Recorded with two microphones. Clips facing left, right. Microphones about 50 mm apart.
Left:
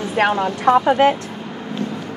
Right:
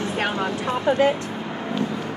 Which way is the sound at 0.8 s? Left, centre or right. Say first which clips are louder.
Left 4 dB; left.